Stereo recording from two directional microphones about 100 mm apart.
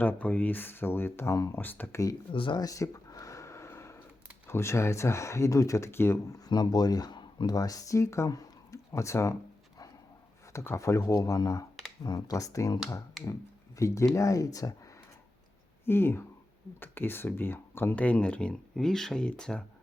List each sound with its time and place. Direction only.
0.0 s speech: 15° left (ahead or behind)
2.3 s speech: 60° left (ahead or behind)
2.6 s a sound: 35° left (ahead or behind)
4.4 s speech: 25° left (ahead or behind)
6.5 s speech: 40° left (ahead or behind)
13.7 s speech: 30° left (ahead or behind)
15.9 s speech: 25° left (ahead or behind); by 19.6 s 10° left (ahead or behind)